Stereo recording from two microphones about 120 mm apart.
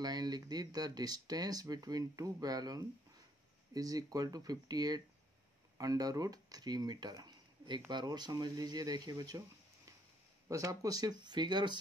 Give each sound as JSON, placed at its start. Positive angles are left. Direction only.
{"t": 0.0, "sound": "speech", "side_deg": -35}
{"t": 10.5, "sound": "speech", "side_deg": -30}